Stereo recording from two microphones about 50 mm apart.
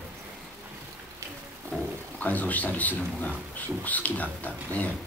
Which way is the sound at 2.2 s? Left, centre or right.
Left.